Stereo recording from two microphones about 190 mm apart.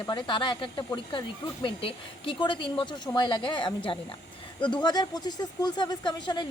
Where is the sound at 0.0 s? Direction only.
25° left (ahead or behind).